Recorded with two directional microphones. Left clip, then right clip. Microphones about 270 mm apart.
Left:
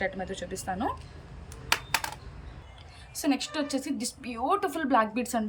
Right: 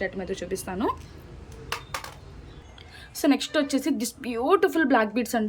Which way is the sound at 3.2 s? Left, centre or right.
Centre.